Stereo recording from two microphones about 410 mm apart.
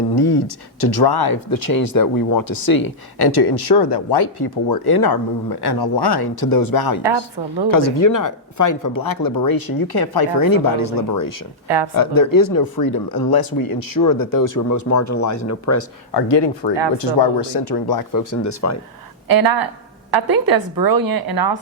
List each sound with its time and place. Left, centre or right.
0.2 s speech: left
7.0 s a woman's voice: right
7.7 s speech: left
16.1 s speech: left
19.3 s a woman's voice: right